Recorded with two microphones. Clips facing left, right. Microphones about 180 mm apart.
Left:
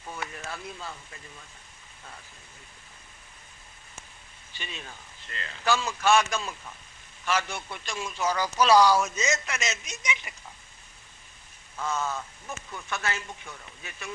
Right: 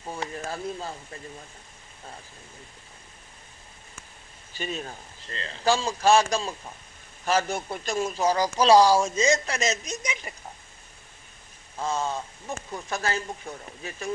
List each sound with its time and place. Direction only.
0.0 s speech: 30° right (ahead or behind)
4.5 s speech: 40° right (ahead or behind)
11.8 s speech: 30° right (ahead or behind)